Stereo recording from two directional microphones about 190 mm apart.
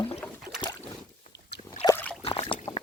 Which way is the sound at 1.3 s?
60° left (ahead or behind).